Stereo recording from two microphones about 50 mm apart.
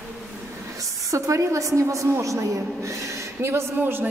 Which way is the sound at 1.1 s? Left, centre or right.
Right.